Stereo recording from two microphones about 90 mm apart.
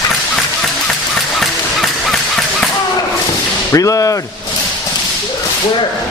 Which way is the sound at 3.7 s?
40° left (ahead or behind).